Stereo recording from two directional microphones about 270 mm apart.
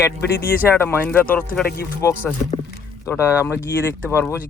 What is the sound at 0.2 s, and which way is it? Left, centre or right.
Speech, left.